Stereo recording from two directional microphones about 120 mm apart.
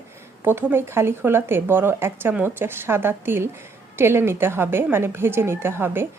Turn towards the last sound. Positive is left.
turn(degrees=-20)  # may be behind; listen again after turning